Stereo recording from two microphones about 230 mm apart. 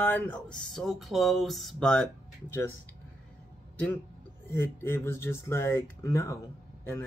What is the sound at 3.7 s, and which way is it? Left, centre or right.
Speech, centre.